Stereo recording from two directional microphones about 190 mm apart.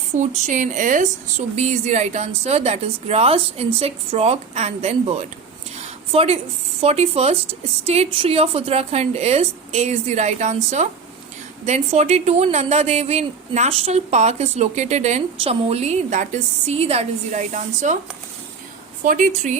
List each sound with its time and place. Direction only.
0.2 s speech: 40° right (ahead or behind)
19.0 s speech: 45° right (ahead or behind)